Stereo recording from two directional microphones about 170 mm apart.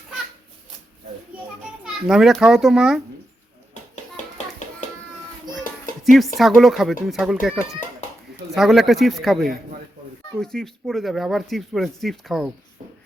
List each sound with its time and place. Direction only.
1.8 s speech: 5° right (ahead or behind)
4.6 s a sound: 45° left (ahead or behind)
6.0 s speech: centre (ahead or behind)